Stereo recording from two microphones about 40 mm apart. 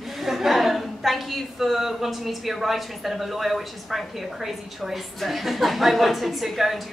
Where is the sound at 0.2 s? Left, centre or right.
Centre.